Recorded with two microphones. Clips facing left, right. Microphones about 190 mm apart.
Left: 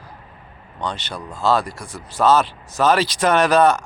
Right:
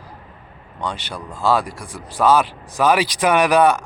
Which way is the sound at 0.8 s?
10° right (ahead or behind).